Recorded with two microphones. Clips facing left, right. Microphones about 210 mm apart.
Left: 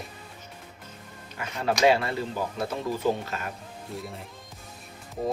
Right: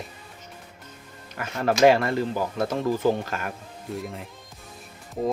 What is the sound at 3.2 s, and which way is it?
Speech, 50° right (ahead or behind).